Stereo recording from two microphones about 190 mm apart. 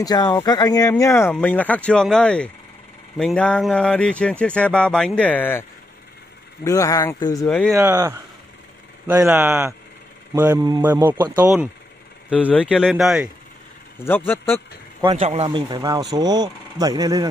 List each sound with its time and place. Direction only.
0.0 s speech: 20° left (ahead or behind)
7.4 s speech: 5° left (ahead or behind)
7.7 s speech: 15° right (ahead or behind)
13.9 s speech: 10° left (ahead or behind)
15.1 s speech: 35° right (ahead or behind)
15.4 s speech: 25° right (ahead or behind)